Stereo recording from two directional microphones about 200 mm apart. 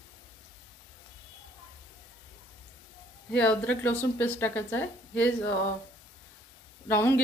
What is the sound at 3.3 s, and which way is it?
Speech, 5° left (ahead or behind).